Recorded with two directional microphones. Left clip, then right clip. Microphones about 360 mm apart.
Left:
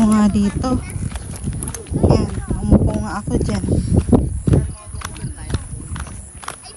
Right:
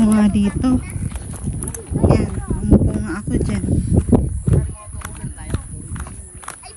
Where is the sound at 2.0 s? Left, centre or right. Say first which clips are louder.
Even; centre.